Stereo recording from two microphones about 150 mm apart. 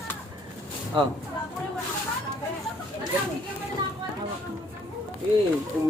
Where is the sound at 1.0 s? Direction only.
30° right (ahead or behind).